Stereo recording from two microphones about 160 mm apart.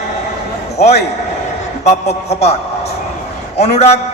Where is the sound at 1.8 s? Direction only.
45° left (ahead or behind).